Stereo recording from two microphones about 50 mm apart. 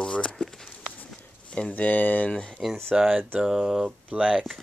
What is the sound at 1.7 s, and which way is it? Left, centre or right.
Speech, left.